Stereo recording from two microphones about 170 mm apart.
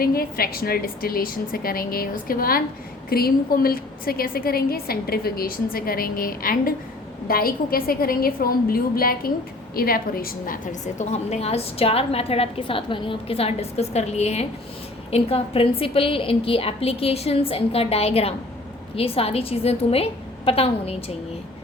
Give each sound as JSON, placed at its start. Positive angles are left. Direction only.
{"t": 0.0, "sound": "a woman's voice", "side_deg": 60}